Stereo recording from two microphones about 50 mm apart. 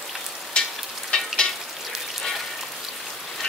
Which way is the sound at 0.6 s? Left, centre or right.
Centre.